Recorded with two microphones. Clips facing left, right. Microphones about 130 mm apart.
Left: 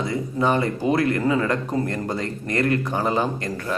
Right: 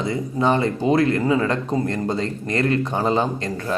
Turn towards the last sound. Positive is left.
turn(degrees=-25)  # may be behind; listen again after turning